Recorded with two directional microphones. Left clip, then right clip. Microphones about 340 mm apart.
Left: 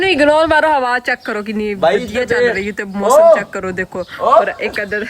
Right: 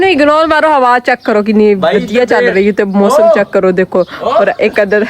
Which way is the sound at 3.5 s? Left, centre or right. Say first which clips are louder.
Right 13 dB; right.